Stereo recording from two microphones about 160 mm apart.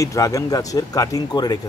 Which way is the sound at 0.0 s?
20° left (ahead or behind).